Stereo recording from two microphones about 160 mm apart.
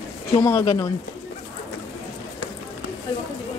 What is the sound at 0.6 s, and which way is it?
Speech, 30° left (ahead or behind).